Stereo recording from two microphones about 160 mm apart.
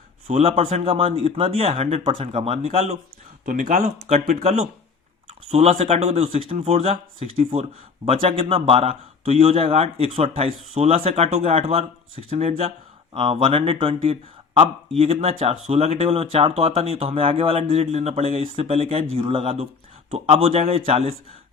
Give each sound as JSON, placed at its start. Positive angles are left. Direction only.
{"t": 0.3, "sound": "speech", "side_deg": -40}
{"t": 3.4, "sound": "speech", "side_deg": -55}
{"t": 4.4, "sound": "speech", "side_deg": -40}